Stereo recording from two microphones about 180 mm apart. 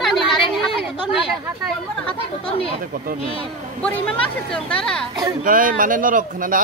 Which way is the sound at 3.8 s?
5° left (ahead or behind).